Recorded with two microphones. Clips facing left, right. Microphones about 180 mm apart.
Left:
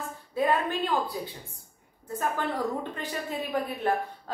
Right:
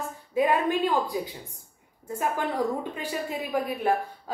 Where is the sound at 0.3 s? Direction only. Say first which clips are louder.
Right 3 dB; 15° right (ahead or behind).